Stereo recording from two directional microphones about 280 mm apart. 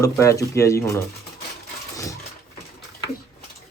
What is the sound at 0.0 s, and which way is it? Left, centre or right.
Speech, centre.